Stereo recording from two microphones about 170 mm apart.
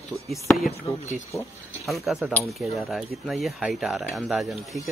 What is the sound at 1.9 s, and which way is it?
Speech, centre (ahead or behind).